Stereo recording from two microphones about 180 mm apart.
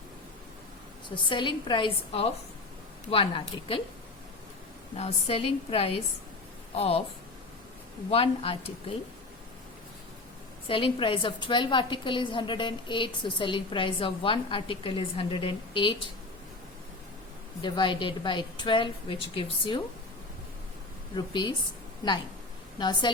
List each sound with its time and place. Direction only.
1.3 s a woman's voice: 25° left (ahead or behind)
4.9 s a woman's voice: 35° left (ahead or behind)
8.1 s a woman's voice: 30° left (ahead or behind)
10.7 s a woman's voice: 30° left (ahead or behind)
17.6 s a woman's voice: 25° left (ahead or behind)
21.2 s a woman's voice: 25° left (ahead or behind)
22.8 s a woman's voice: 25° left (ahead or behind)